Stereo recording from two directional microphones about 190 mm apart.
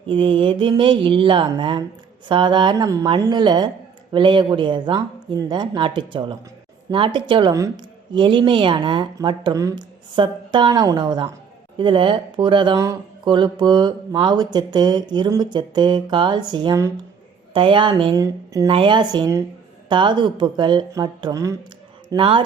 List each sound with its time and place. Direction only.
0.1 s speech: 25° right (ahead or behind)